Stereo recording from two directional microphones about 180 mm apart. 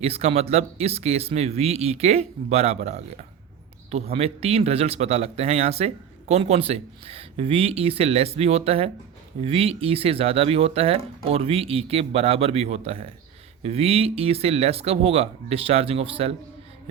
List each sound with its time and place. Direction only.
0.0 s speech: 35° right (ahead or behind)
4.1 s speech: 35° right (ahead or behind)